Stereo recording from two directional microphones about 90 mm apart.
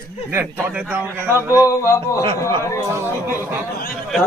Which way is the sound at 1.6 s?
35° left (ahead or behind).